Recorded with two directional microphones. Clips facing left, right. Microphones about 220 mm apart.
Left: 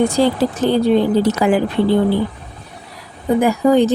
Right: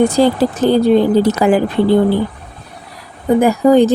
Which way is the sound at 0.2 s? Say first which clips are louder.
Right 3 dB; 40° right (ahead or behind).